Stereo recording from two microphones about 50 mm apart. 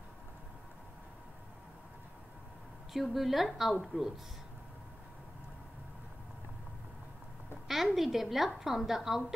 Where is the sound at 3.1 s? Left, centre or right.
Centre.